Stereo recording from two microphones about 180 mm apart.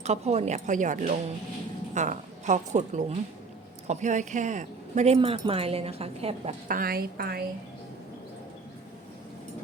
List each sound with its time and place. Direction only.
0.0 s a woman's voice: 35° right (ahead or behind)
6.7 s a woman's voice: 55° right (ahead or behind)